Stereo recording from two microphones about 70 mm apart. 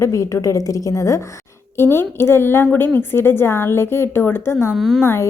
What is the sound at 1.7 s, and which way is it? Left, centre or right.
A woman's voice, left.